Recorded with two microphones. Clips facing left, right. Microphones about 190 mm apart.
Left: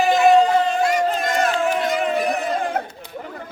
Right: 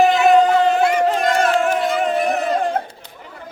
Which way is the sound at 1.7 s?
45° right (ahead or behind).